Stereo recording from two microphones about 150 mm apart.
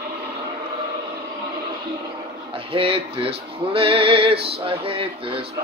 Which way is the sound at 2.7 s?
40° right (ahead or behind).